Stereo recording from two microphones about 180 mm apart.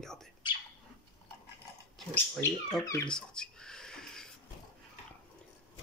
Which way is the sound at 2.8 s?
15° left (ahead or behind).